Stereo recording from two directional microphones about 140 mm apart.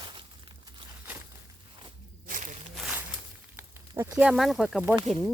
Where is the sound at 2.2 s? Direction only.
60° right (ahead or behind).